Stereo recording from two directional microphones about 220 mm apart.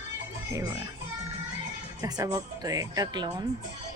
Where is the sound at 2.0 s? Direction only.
15° right (ahead or behind).